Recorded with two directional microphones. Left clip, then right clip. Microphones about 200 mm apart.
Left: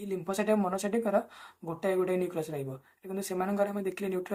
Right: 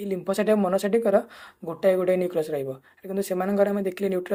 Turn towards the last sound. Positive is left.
turn(degrees=-40)  # may be behind; listen again after turning